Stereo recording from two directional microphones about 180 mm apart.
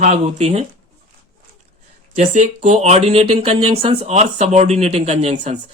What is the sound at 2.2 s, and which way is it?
Speech, 40° right (ahead or behind).